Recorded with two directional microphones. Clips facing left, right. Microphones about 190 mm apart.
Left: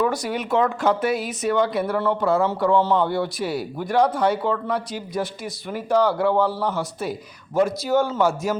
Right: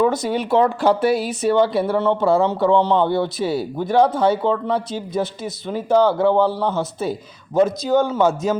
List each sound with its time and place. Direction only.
0.0 s speech: 25° right (ahead or behind)